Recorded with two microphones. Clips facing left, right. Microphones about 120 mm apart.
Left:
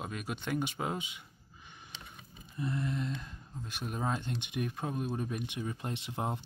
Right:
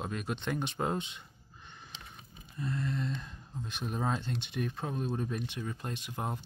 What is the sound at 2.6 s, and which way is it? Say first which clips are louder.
Speech: even; 20° left (ahead or behind).